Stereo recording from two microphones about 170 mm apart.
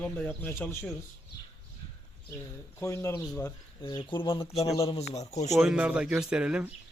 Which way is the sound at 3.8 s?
30° left (ahead or behind).